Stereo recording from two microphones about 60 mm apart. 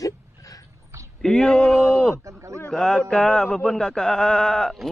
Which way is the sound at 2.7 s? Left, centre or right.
Centre.